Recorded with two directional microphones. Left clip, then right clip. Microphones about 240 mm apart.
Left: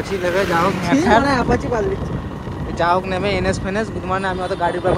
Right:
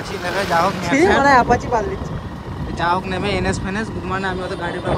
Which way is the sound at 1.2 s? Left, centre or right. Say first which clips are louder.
Right 5 dB; right.